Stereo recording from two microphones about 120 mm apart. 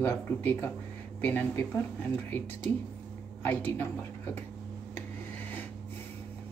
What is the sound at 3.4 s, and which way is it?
Speech, 15° left (ahead or behind).